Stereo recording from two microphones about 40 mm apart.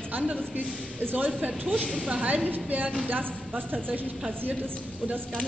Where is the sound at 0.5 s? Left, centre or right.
Right.